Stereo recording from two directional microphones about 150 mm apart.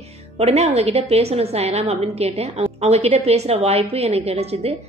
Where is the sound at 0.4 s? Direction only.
45° right (ahead or behind).